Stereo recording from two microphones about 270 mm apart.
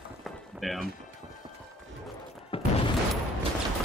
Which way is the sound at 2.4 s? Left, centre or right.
Left.